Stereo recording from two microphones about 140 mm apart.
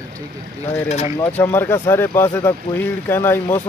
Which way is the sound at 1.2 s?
10° left (ahead or behind).